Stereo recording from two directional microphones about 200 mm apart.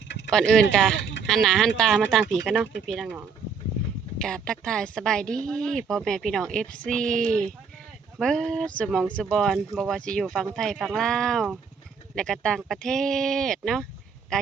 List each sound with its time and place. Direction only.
0.3 s speech: 5° left (ahead or behind)
0.9 s a sound: 65° left (ahead or behind)
1.3 s speech: centre (ahead or behind)
4.2 s speech: 5° left (ahead or behind)